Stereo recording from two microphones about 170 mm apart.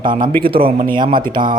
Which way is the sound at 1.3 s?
55° right (ahead or behind).